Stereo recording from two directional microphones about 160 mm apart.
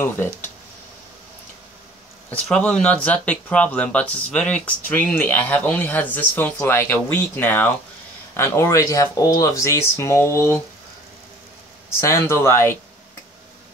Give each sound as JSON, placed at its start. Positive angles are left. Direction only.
{"t": 0.0, "sound": "speech", "side_deg": 15}
{"t": 2.3, "sound": "speech", "side_deg": 5}
{"t": 12.0, "sound": "speech", "side_deg": 15}